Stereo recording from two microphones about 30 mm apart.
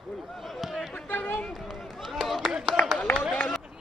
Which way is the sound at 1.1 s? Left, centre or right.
Left.